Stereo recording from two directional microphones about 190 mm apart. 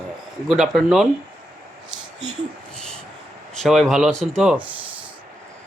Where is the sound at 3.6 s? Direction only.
Centre (ahead or behind).